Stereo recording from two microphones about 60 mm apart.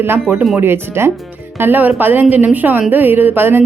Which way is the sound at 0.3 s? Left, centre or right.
Right.